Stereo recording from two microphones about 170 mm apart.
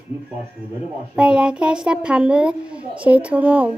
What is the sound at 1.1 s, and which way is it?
A child's voice, 5° right (ahead or behind).